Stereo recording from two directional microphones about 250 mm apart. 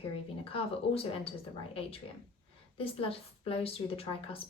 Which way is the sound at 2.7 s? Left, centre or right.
Left.